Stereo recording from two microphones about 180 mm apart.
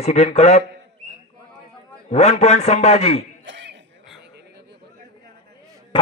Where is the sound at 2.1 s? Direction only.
35° left (ahead or behind).